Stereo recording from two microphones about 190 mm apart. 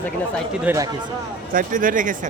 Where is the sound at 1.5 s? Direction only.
45° right (ahead or behind).